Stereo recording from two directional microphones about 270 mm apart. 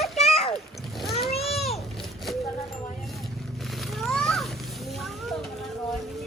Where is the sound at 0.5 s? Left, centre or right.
Centre.